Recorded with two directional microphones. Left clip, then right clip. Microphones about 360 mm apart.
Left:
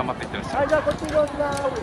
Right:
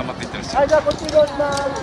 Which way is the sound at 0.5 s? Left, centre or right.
Right.